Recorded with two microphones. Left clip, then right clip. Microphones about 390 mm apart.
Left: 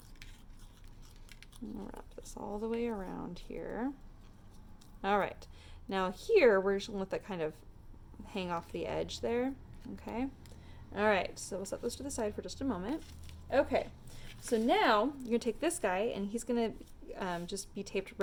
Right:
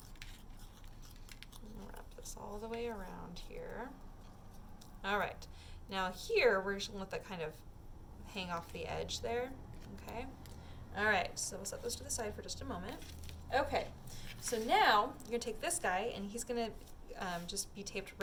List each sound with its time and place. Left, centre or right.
1.4 s cat: centre
2.0 s a woman's voice: centre
5.0 s a woman's voice: centre
13.0 s a sound: centre
13.5 s a sound: centre
14.3 s a woman's voice: centre